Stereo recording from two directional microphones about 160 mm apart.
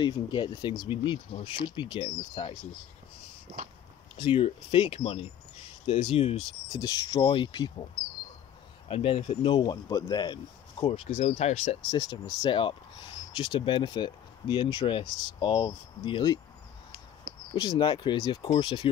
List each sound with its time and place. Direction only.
0.0 s speech: 30° left (ahead or behind)
4.2 s speech: 35° left (ahead or behind)
6.7 s speech: 25° left (ahead or behind)
8.8 s speech: 35° left (ahead or behind)
11.9 s speech: 25° left (ahead or behind)
17.6 s speech: 30° left (ahead or behind)